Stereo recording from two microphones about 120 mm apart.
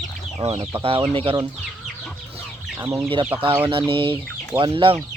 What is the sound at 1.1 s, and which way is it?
Speech, 50° right (ahead or behind).